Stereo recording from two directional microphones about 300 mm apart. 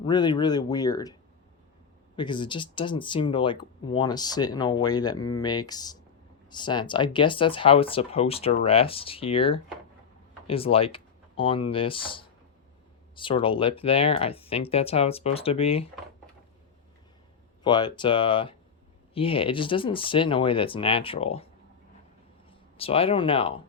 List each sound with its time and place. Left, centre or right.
0.0 s speech: centre
2.1 s speech: centre
17.6 s speech: centre
22.8 s speech: centre